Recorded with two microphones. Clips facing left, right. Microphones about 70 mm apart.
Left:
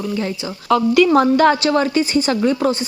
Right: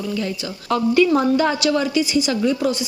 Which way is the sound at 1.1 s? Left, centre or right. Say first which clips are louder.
Left 5 dB; left.